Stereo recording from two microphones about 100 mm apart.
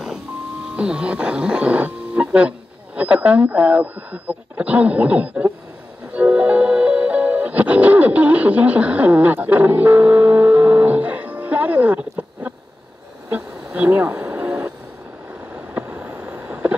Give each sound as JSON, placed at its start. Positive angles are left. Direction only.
{"t": 0.7, "sound": "speech", "side_deg": -10}
{"t": 6.1, "sound": "music", "side_deg": -15}
{"t": 13.3, "sound": "a sound", "side_deg": -15}